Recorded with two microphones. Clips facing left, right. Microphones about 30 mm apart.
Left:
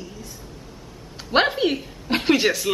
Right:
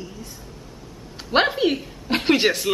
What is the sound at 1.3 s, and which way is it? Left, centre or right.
A woman's voice, centre.